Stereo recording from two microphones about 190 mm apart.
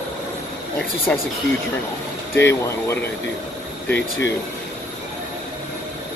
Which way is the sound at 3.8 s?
65° left (ahead or behind).